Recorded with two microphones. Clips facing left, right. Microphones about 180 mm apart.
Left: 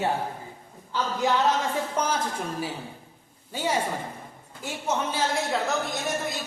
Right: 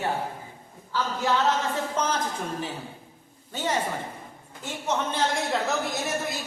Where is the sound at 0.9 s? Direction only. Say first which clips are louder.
Left 1 dB; 15° left (ahead or behind).